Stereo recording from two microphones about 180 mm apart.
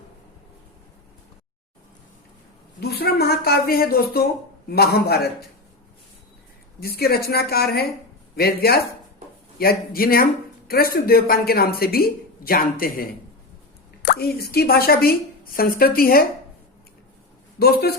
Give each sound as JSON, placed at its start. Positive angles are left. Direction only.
{"t": 2.8, "sound": "speech", "side_deg": 60}
{"t": 6.7, "sound": "speech", "side_deg": 60}
{"t": 17.6, "sound": "speech", "side_deg": 60}